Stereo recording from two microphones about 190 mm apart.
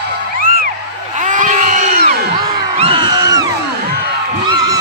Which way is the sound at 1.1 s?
40° right (ahead or behind).